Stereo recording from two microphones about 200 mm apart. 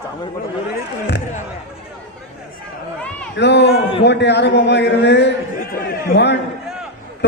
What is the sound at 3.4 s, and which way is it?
A man's voice, 60° left (ahead or behind).